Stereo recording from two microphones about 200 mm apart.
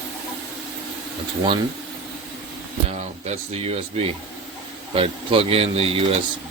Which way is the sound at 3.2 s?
35° right (ahead or behind).